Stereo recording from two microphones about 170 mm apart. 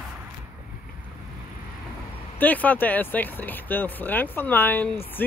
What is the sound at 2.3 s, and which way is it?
Speech, 10° left (ahead or behind).